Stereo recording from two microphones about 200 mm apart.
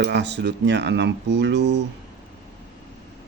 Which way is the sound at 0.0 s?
60° right (ahead or behind).